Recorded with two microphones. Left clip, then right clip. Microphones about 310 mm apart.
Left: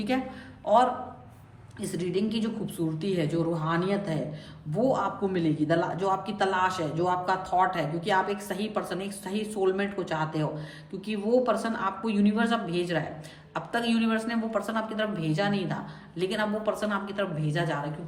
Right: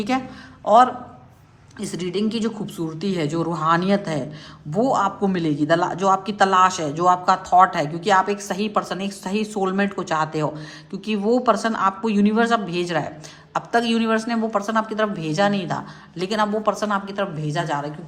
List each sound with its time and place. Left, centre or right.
0.6 s a man's voice: centre